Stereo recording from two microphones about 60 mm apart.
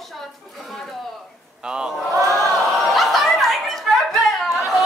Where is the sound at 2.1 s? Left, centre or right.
Right.